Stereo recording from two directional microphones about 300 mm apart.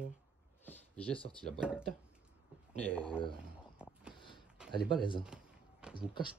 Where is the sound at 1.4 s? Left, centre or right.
Centre.